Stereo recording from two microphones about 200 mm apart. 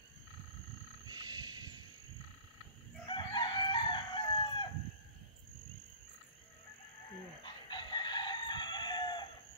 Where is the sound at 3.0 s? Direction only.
25° left (ahead or behind).